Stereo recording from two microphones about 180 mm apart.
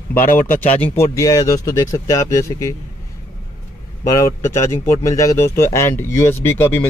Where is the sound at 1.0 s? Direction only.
20° left (ahead or behind).